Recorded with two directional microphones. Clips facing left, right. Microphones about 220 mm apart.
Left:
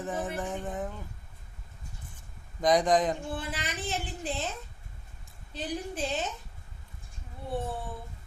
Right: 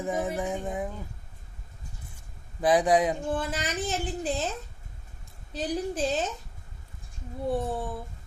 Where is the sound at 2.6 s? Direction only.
5° right (ahead or behind).